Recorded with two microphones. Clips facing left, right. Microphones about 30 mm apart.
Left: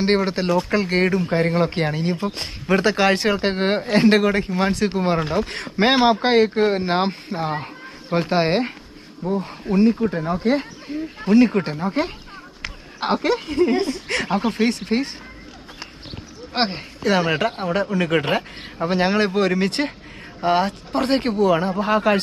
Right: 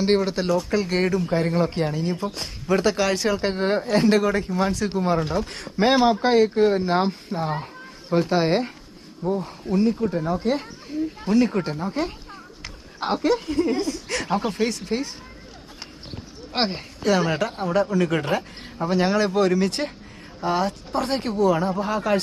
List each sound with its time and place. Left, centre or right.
0.0 s speech: left
16.5 s speech: centre
17.0 s speech: left